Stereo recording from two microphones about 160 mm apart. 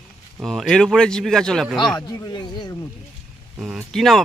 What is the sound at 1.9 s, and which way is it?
Speech, 30° left (ahead or behind).